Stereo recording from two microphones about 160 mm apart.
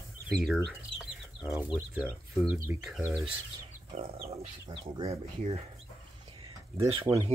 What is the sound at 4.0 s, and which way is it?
Speech, 35° right (ahead or behind).